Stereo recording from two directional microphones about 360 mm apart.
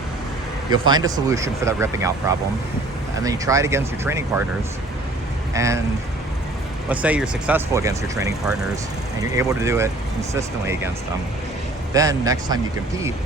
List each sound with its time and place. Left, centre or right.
0.7 s speech: centre
3.2 s speech: centre
5.5 s speech: centre
6.8 s speech: centre
11.9 s speech: centre